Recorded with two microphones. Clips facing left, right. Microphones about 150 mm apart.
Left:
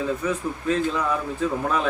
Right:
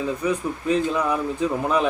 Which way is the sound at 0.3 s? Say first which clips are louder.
Right 2 dB; 15° right (ahead or behind).